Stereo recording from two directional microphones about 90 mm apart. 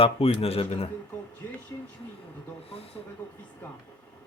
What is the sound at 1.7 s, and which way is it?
Speech, 35° left (ahead or behind).